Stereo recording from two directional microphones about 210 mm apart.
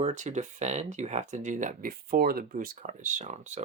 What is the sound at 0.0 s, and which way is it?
Speech, 35° right (ahead or behind).